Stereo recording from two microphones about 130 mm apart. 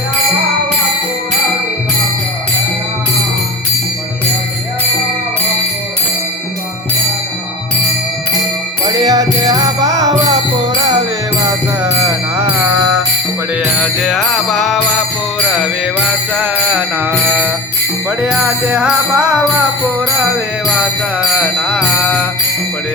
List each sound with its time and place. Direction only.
8.9 s music: 30° right (ahead or behind)
11.4 s music: 25° right (ahead or behind)
13.8 s music: centre (ahead or behind)
16.4 s music: 10° right (ahead or behind)
21.2 s music: 5° right (ahead or behind)